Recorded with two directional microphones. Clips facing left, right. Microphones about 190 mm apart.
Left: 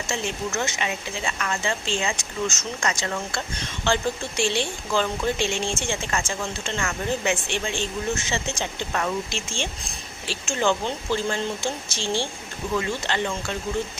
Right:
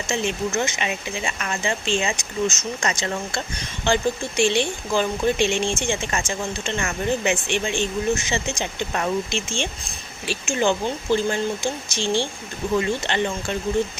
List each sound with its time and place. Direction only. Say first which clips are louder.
0.1 s speech: right 5 dB; 20° right (ahead or behind)